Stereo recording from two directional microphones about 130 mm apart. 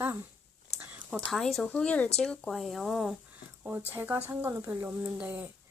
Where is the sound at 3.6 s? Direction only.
15° right (ahead or behind).